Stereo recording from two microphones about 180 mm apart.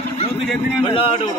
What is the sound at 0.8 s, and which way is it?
Speech, 30° left (ahead or behind).